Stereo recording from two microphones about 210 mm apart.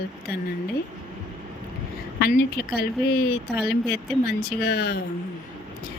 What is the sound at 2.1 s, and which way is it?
Speech, 45° left (ahead or behind).